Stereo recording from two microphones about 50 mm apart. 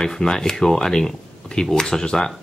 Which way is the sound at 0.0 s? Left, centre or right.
Centre.